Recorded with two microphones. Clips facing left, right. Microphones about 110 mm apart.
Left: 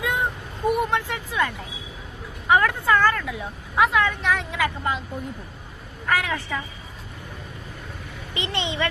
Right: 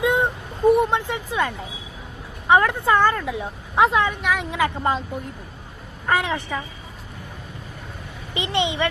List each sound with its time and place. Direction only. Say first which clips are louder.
0.0 s a sound: right 5 dB; 20° right (ahead or behind)
0.7 s a woman's voice: right 5 dB; 20° right (ahead or behind)
4.8 s a woman's voice: right 4 dB; 35° right (ahead or behind)
6.1 s a woman's voice: right 2 dB; 25° right (ahead or behind)
8.3 s a woman's voice: right 5 dB; 20° right (ahead or behind)